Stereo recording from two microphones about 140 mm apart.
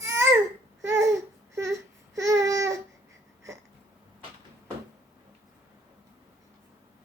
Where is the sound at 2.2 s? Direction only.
25° right (ahead or behind).